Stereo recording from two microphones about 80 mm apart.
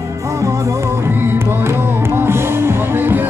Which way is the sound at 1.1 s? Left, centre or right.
Right.